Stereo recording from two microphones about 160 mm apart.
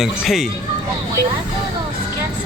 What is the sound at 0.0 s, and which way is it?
Speech, centre (ahead or behind).